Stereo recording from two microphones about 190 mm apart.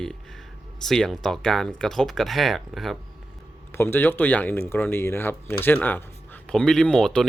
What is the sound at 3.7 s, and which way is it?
Speech, 10° left (ahead or behind).